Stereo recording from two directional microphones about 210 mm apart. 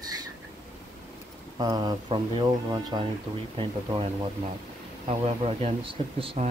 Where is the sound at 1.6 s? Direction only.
20° right (ahead or behind).